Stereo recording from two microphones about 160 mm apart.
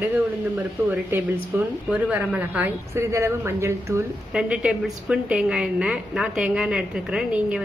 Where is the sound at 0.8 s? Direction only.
10° right (ahead or behind).